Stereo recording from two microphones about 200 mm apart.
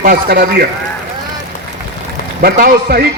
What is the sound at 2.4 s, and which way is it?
Speech, 50° right (ahead or behind).